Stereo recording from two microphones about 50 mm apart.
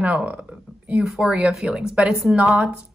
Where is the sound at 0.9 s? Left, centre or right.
Centre.